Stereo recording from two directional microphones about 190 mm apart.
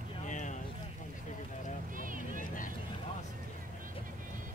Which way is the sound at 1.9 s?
45° right (ahead or behind).